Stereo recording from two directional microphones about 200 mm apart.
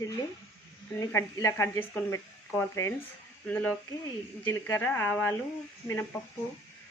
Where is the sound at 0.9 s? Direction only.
15° left (ahead or behind).